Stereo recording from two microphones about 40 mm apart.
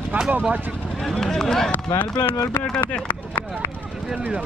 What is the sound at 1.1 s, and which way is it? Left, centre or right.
Speech, centre.